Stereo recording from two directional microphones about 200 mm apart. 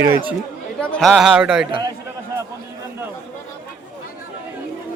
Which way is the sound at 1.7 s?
25° right (ahead or behind).